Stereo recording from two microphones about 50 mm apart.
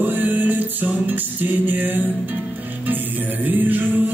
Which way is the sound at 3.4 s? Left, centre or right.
Right.